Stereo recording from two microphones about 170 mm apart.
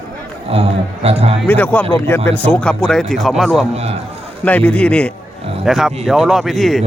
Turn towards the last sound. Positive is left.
turn(degrees=0)  # may be behind; listen again after turning